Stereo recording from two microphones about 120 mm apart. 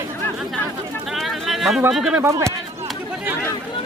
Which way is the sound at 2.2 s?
25° right (ahead or behind).